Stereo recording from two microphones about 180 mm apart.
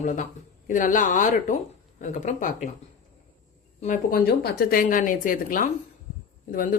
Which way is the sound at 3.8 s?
50° left (ahead or behind).